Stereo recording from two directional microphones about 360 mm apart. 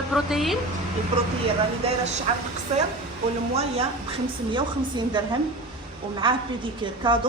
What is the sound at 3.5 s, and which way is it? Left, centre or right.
A woman's voice, centre.